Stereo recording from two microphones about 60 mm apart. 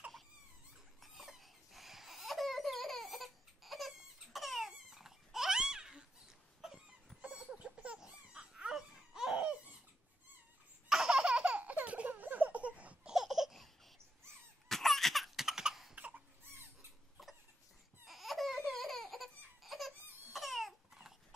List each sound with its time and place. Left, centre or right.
1.0 s a sound: centre
7.2 s chicken: centre
7.6 s laughter: centre
10.9 s baby laughter: centre
13.1 s laughter: centre
14.7 s laughter: centre
15.9 s crying: centre
18.0 s laughter: centre
18.6 s baby laughter: centre
20.3 s a sound: centre